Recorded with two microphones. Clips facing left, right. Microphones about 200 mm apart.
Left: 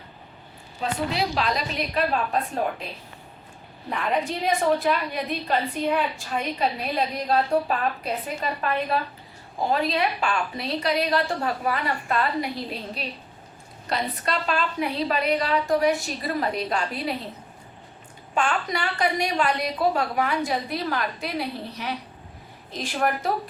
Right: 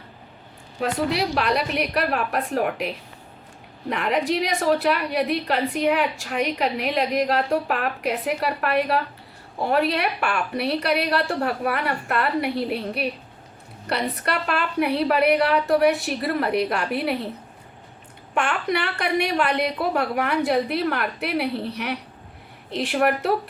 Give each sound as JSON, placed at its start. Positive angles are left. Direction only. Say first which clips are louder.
{"t": 0.8, "sound": "a woman's voice", "louder": "right 3 dB", "side_deg": -65}
{"t": 18.3, "sound": "a woman's voice", "louder": "right 2 dB", "side_deg": -65}